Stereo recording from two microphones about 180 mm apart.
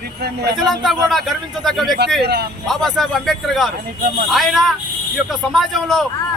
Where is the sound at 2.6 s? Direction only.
Centre (ahead or behind).